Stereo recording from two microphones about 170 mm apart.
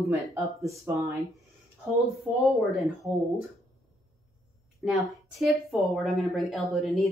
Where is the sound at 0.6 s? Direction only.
15° right (ahead or behind).